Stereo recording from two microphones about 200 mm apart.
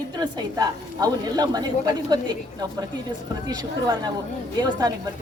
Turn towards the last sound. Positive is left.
turn(degrees=-20)  # may be behind; listen again after turning